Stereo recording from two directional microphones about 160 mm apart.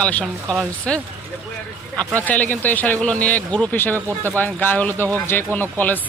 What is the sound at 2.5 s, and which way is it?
Speech, 10° left (ahead or behind).